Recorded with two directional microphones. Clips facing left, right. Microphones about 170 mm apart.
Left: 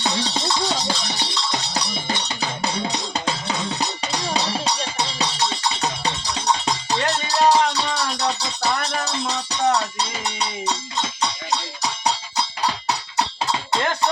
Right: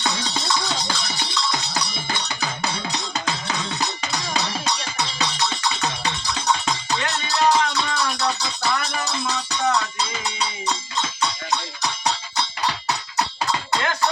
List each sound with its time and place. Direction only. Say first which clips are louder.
0.0 s music: left 3 dB; 35° left (ahead or behind)